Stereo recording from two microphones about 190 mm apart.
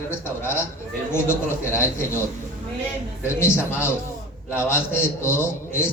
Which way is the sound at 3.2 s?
15° left (ahead or behind).